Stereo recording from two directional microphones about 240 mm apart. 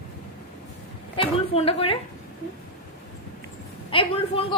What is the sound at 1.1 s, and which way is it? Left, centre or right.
Speech, left.